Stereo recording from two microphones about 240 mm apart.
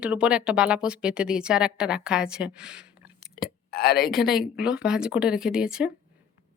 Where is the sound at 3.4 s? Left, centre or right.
Left.